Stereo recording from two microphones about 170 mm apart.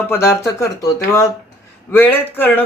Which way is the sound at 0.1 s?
15° left (ahead or behind).